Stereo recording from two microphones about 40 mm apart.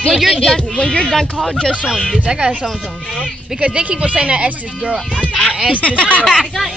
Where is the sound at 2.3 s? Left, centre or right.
Right.